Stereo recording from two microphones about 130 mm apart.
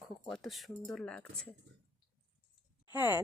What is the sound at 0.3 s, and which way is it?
Speech, centre (ahead or behind).